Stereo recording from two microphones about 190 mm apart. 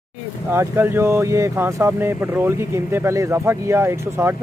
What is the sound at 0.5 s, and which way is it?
Speech, 10° right (ahead or behind).